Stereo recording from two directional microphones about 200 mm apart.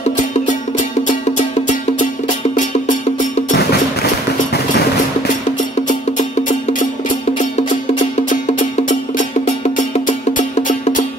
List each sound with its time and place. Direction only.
0.2 s music: 40° left (ahead or behind)
8.0 s music: 40° left (ahead or behind)